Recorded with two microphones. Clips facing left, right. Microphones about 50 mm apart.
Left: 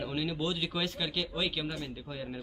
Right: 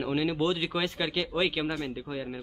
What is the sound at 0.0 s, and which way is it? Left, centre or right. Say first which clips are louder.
Speech: right 6 dB; centre.